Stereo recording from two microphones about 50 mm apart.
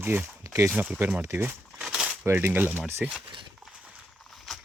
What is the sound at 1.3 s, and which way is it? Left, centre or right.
Speech, right.